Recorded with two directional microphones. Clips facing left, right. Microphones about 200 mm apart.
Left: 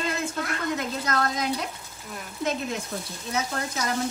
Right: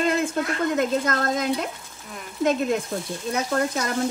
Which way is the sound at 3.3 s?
50° right (ahead or behind).